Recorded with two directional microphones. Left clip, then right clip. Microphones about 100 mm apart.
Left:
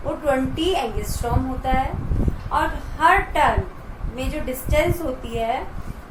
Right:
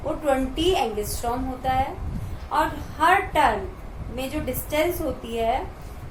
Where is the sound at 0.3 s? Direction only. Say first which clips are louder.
Left 1 dB; 30° right (ahead or behind).